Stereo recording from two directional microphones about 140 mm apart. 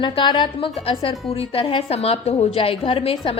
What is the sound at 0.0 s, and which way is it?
A woman's voice, 35° left (ahead or behind).